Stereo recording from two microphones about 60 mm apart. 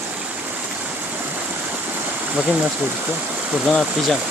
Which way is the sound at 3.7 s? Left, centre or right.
Centre.